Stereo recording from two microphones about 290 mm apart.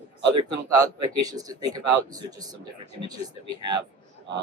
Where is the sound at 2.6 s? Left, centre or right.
Right.